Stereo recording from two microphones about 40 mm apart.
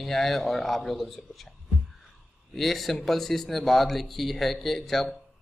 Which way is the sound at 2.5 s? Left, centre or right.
Centre.